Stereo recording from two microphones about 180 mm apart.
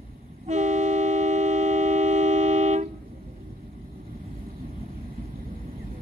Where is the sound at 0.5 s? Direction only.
40° right (ahead or behind).